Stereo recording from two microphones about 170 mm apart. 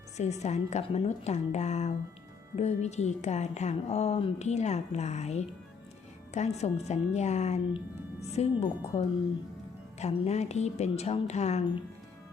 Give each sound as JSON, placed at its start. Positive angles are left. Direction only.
{"t": 0.2, "sound": "speech", "side_deg": 40}